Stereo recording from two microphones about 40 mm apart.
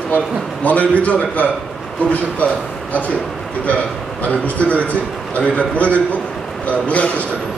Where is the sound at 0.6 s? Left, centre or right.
Left.